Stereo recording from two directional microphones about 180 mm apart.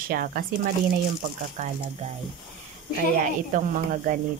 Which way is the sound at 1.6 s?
40° right (ahead or behind).